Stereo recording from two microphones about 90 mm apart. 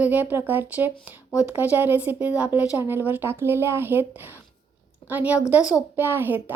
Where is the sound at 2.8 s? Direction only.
25° right (ahead or behind).